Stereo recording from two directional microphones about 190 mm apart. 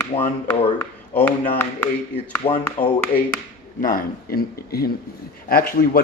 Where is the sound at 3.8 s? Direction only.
50° left (ahead or behind).